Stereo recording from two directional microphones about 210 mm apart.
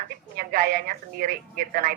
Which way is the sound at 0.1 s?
45° right (ahead or behind).